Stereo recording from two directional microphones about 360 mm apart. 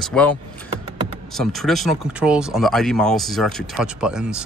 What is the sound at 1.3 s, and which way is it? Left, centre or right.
Speech, centre.